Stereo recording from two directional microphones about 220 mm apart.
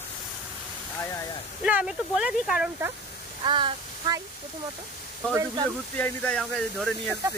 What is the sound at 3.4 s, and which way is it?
Child singing, 20° right (ahead or behind).